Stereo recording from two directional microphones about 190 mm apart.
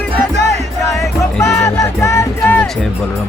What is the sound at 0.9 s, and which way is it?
Music, 15° left (ahead or behind).